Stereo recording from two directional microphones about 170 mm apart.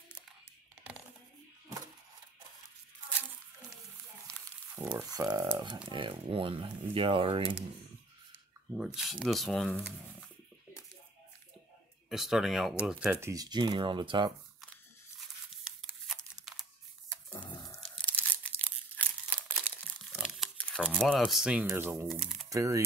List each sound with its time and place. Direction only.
4.7 s speech: 10° right (ahead or behind)
5.1 s speech: 20° right (ahead or behind)
8.7 s speech: 5° right (ahead or behind)
12.1 s speech: centre (ahead or behind)
13.3 s speech: 25° right (ahead or behind)
15.1 s a sound: centre (ahead or behind)
17.5 s biting: 25° left (ahead or behind)
18.0 s crumpling: 10° left (ahead or behind)
20.8 s speech: centre (ahead or behind)
22.5 s speech: 20° right (ahead or behind)